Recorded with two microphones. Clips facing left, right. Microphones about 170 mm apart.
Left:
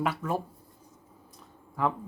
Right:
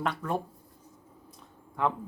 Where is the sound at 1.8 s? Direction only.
Centre (ahead or behind).